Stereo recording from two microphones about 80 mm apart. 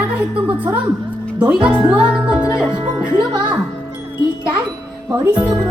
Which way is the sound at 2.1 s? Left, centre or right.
Centre.